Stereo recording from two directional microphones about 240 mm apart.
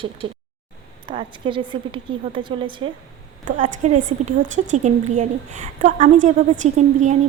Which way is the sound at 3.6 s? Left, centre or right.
Right.